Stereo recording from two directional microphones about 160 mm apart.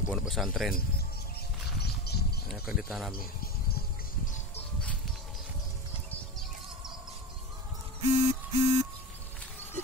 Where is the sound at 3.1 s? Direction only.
70° left (ahead or behind).